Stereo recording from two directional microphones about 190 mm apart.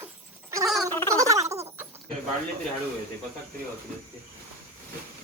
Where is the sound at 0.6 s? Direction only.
Centre (ahead or behind).